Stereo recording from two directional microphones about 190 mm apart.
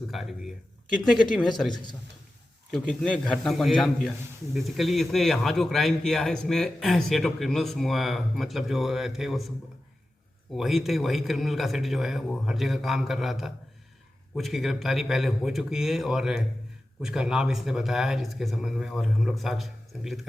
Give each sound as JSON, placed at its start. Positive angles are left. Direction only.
{"t": 0.1, "sound": "a man's voice", "side_deg": 0}
{"t": 1.7, "sound": "a man's voice", "side_deg": 25}
{"t": 2.7, "sound": "a man's voice", "side_deg": 5}
{"t": 10.6, "sound": "a man's voice", "side_deg": 0}